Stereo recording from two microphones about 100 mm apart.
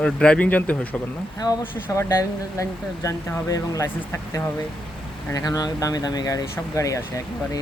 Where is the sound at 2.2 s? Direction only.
35° left (ahead or behind).